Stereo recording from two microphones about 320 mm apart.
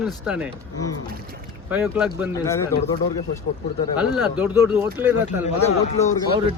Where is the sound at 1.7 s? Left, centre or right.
Centre.